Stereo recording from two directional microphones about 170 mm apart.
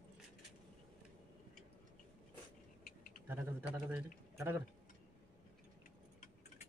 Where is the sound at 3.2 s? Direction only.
10° right (ahead or behind).